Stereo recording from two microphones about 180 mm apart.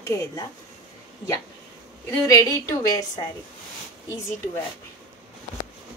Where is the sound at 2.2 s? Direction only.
20° left (ahead or behind).